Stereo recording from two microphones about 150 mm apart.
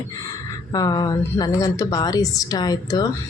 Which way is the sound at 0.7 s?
25° left (ahead or behind).